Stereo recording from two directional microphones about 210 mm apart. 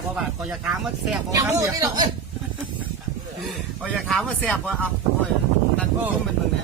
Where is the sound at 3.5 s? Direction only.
Centre (ahead or behind).